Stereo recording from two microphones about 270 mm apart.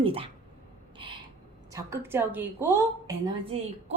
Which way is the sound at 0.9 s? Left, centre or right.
Centre.